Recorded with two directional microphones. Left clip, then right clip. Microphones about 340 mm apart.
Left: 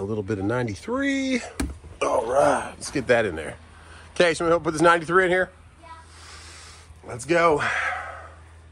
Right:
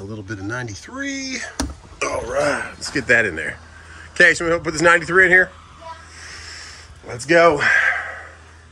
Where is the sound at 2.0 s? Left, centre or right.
Centre.